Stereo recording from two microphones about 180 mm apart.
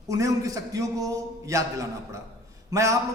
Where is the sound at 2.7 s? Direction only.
15° right (ahead or behind).